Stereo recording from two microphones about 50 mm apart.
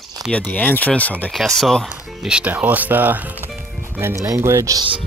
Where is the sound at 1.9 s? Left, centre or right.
Centre; by 3.5 s right.